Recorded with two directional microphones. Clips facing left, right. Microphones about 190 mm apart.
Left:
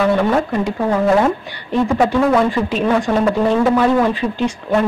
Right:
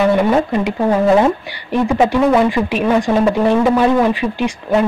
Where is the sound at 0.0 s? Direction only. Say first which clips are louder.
Right 2 dB; 15° right (ahead or behind).